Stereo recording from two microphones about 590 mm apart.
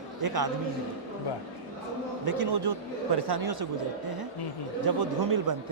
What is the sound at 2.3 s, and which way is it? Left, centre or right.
Speech, right.